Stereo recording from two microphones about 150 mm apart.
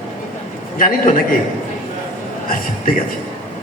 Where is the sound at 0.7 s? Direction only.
65° left (ahead or behind).